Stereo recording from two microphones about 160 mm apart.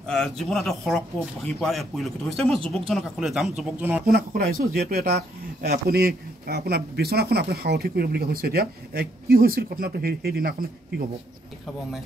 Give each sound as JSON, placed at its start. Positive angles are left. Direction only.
{"t": 0.0, "sound": "speech", "side_deg": 5}
{"t": 4.0, "sound": "speech", "side_deg": -65}